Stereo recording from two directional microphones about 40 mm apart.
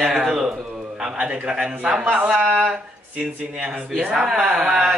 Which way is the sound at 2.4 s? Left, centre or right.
Right.